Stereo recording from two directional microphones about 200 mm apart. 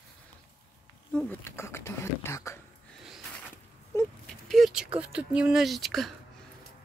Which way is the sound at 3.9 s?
15° left (ahead or behind).